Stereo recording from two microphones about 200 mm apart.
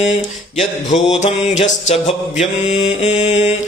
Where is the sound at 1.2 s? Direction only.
35° left (ahead or behind).